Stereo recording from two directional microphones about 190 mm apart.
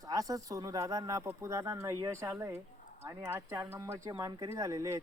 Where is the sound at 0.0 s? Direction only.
20° right (ahead or behind).